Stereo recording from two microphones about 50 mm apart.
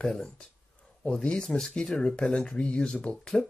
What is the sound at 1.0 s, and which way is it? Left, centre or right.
Speech, centre.